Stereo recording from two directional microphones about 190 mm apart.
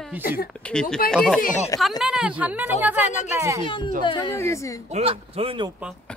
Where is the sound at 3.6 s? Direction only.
25° left (ahead or behind).